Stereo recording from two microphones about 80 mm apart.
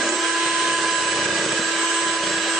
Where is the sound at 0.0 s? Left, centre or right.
Centre.